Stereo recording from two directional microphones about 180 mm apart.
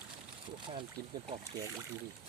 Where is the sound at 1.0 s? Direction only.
60° right (ahead or behind).